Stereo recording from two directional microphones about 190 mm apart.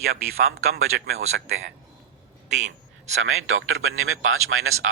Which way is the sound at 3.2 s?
90° right.